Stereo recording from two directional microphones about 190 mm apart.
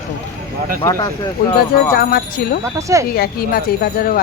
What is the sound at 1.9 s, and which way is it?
Speech, 55° left (ahead or behind).